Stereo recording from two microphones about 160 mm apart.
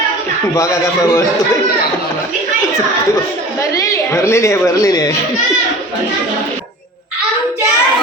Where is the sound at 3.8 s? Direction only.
20° left (ahead or behind).